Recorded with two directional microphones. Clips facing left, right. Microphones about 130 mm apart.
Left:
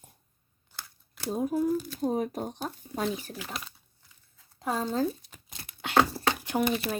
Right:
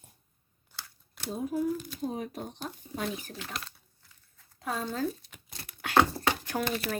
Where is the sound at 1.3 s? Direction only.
45° left (ahead or behind).